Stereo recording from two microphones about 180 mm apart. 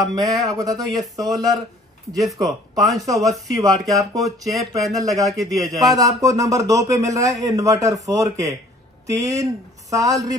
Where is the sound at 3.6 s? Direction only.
20° right (ahead or behind).